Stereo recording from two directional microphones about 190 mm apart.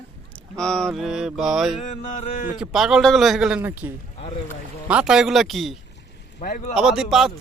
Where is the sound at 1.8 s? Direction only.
40° left (ahead or behind).